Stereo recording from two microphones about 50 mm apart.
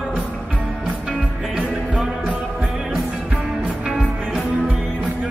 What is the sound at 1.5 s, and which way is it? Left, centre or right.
Music, centre.